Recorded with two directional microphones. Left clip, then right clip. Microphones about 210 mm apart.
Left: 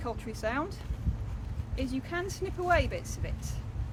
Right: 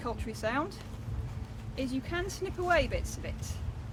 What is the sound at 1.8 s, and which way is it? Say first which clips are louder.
Speech: even; 10° right (ahead or behind).